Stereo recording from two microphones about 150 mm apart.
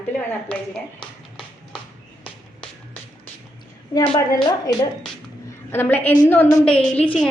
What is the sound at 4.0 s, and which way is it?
Speech, 25° left (ahead or behind).